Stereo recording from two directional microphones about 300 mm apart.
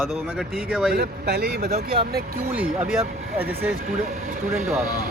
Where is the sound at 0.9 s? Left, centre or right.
Right.